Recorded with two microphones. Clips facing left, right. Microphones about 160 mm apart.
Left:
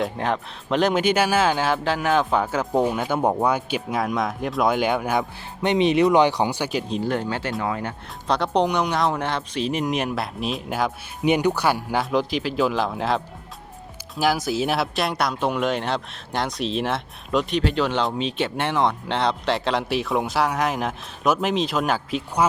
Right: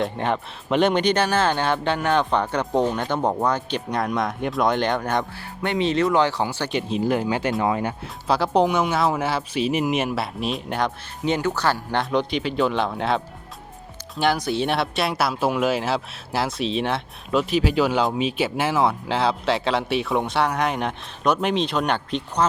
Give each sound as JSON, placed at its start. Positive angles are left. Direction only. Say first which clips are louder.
{"t": 0.0, "sound": "speech", "louder": "right 1 dB", "side_deg": 0}
{"t": 5.6, "sound": "speech", "louder": "left 3 dB", "side_deg": 20}
{"t": 6.7, "sound": "speech", "louder": "right 1 dB", "side_deg": 0}
{"t": 7.0, "sound": "speech", "louder": "right 3 dB", "side_deg": -10}
{"t": 8.3, "sound": "speech", "louder": "right 2 dB", "side_deg": -5}
{"t": 11.2, "sound": "speech", "louder": "left 3 dB", "side_deg": 15}